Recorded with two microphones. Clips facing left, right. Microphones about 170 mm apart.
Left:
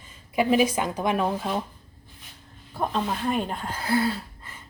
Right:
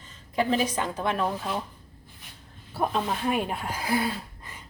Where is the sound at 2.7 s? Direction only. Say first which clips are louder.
Even; 5° right (ahead or behind).